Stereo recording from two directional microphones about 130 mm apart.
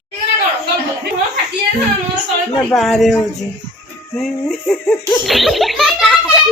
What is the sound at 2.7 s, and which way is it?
A woman's voice, centre (ahead or behind).